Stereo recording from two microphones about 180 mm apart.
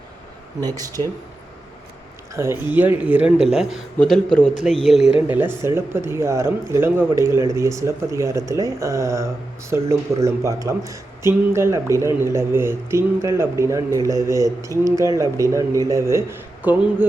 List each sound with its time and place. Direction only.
0.6 s speech: 20° right (ahead or behind)
2.3 s a man's voice: 15° right (ahead or behind)